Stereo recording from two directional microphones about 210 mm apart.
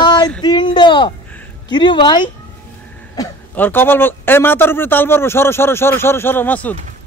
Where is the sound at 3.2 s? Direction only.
10° left (ahead or behind).